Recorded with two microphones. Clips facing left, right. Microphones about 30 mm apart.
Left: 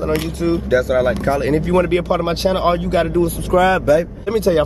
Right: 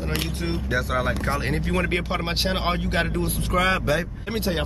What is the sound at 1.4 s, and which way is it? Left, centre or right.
Speech, centre.